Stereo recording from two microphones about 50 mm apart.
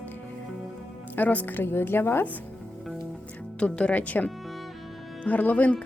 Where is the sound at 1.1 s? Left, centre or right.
Left.